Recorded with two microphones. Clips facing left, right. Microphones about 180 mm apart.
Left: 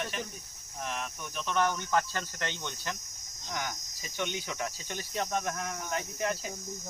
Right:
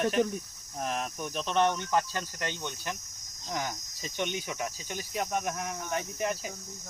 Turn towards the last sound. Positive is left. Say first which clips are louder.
# right 1 dB
turn(degrees=-15)  # may be behind; listen again after turning